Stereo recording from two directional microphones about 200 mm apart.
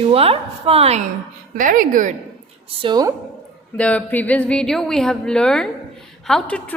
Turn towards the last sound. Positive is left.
turn(degrees=5)  # may be behind; listen again after turning